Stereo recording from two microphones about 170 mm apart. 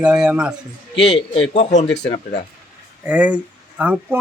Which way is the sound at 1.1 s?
35° left (ahead or behind).